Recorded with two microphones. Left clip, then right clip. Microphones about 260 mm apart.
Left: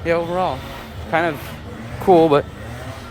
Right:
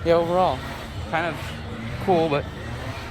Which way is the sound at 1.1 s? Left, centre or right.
Left.